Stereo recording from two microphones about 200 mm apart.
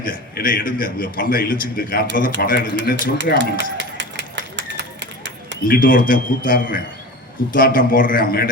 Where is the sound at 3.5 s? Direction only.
65° right (ahead or behind).